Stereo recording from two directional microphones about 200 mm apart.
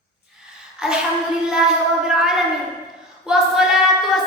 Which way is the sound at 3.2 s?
Centre (ahead or behind).